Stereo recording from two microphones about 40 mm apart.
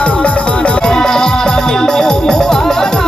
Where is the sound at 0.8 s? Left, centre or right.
Centre.